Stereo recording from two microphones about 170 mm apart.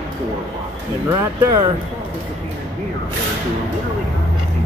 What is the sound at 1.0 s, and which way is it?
Speech, 20° right (ahead or behind).